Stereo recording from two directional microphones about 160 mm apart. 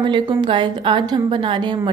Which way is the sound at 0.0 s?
30° right (ahead or behind).